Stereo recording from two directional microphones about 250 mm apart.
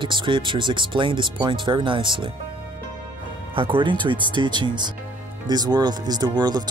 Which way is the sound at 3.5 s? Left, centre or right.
Right.